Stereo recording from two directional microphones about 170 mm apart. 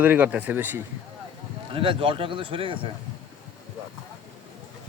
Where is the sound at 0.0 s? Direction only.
10° right (ahead or behind).